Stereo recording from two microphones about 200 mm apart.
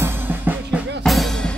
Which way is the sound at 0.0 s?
10° right (ahead or behind).